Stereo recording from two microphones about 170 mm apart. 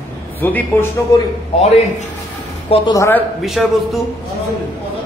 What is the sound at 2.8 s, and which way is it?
Speech, 15° left (ahead or behind).